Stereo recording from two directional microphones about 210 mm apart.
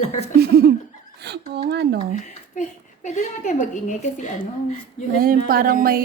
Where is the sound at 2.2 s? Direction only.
35° left (ahead or behind).